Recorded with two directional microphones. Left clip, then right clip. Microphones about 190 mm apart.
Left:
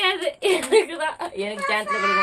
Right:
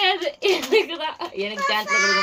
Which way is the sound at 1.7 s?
50° right (ahead or behind).